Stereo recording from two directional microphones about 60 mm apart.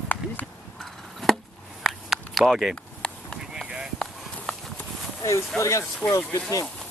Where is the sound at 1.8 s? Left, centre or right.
Centre.